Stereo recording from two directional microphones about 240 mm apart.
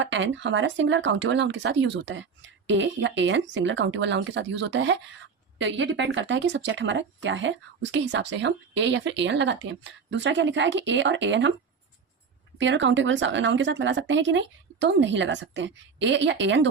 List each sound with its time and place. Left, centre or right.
0.0 s speech: right
12.5 s speech: right